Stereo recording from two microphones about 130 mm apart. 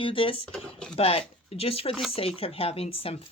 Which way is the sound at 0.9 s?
45° left (ahead or behind).